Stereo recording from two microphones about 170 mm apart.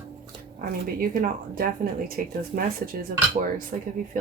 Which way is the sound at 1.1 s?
55° right (ahead or behind).